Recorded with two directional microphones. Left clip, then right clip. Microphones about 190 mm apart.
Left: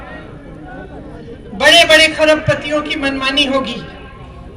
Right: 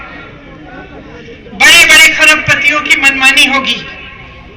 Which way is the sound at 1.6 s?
55° left (ahead or behind).